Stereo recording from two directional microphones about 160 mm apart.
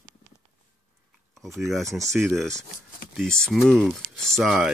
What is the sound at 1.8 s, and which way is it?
Speech, 20° right (ahead or behind).